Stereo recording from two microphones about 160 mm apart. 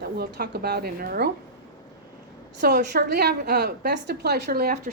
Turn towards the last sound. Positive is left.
turn(degrees=-80)